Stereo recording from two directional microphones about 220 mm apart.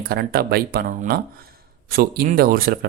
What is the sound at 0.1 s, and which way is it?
Speech, 45° right (ahead or behind).